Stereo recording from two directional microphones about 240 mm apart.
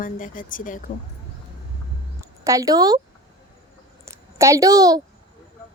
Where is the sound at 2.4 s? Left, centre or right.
Centre.